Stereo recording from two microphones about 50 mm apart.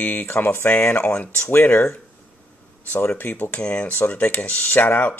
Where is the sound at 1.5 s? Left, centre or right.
Left.